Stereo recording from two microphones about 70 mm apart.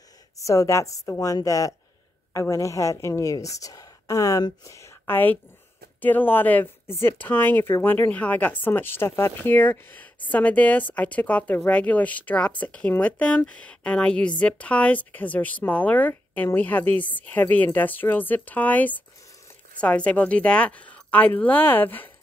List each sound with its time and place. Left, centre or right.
0.5 s a woman's voice: left
5.0 s a woman's voice: left